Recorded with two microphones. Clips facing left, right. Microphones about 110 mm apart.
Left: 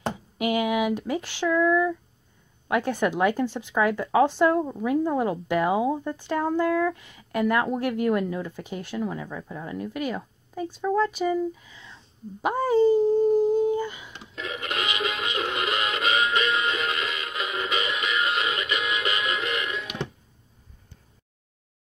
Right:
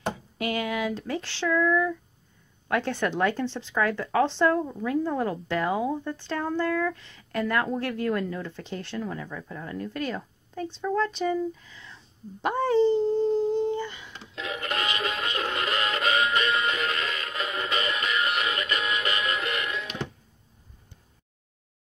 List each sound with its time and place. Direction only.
0.4 s speech: 15° left (ahead or behind)